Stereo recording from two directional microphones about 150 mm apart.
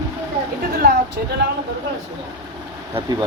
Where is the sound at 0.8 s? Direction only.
90° right.